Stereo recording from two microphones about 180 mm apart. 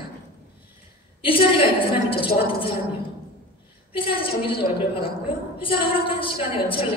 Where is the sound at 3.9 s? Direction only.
30° left (ahead or behind).